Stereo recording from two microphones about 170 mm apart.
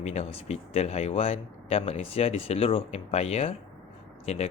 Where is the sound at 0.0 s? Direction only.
40° left (ahead or behind).